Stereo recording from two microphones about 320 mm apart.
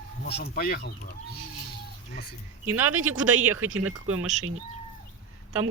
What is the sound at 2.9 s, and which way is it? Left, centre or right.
Speech, right.